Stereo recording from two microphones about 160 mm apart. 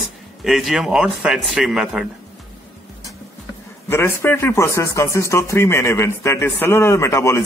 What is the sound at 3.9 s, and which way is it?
A man's voice, 15° left (ahead or behind).